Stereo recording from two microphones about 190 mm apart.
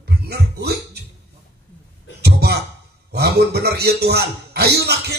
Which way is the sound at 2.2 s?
60° right (ahead or behind).